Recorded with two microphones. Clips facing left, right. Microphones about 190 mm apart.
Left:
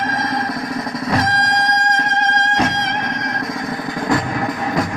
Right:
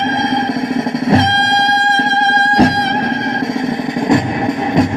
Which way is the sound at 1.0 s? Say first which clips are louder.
Right 5 dB; 25° right (ahead or behind).